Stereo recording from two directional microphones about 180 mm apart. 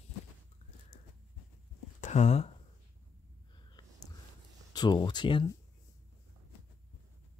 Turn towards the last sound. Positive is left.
turn(degrees=25)  # may be behind; listen again after turning